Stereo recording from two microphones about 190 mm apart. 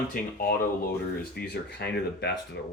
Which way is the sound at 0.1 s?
50° left (ahead or behind).